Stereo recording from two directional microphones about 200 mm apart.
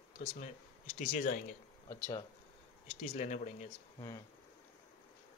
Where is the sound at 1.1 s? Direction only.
45° left (ahead or behind).